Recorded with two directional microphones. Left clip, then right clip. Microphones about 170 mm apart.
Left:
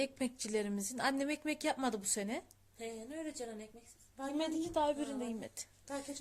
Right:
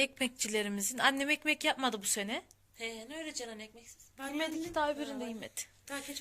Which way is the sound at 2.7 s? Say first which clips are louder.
Right 3 dB; 55° left (ahead or behind).